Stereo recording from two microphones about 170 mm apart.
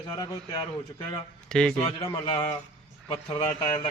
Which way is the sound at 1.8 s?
30° left (ahead or behind).